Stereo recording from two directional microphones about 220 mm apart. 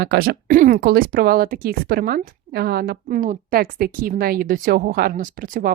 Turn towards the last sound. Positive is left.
turn(degrees=-40)  # may be behind; listen again after turning